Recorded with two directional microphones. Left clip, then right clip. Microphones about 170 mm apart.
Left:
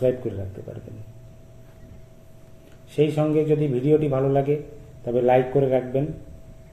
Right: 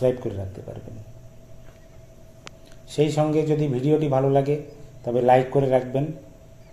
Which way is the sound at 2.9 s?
40° right (ahead or behind).